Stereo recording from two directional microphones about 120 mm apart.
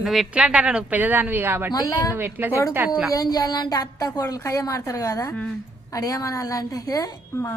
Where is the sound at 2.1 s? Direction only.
15° right (ahead or behind).